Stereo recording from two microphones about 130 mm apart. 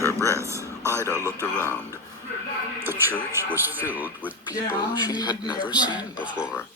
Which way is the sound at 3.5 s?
15° right (ahead or behind).